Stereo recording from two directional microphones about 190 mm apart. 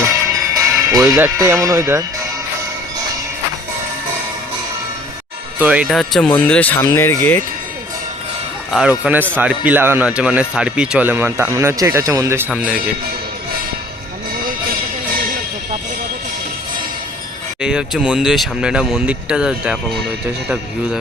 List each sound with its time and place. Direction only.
0.5 s speech: 15° right (ahead or behind)
5.5 s speech: 5° right (ahead or behind); by 7.4 s 10° left (ahead or behind)
8.7 s a man's voice: 5° right (ahead or behind)
12.5 s speech: 5° right (ahead or behind)
17.6 s speech: 5° right (ahead or behind)